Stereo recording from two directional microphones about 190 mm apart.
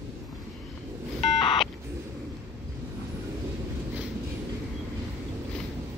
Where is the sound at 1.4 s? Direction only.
25° left (ahead or behind).